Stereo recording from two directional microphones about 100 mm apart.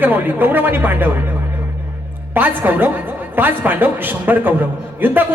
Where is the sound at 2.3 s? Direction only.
20° right (ahead or behind).